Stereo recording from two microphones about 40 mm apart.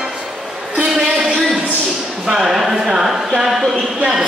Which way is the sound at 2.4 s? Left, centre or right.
Centre.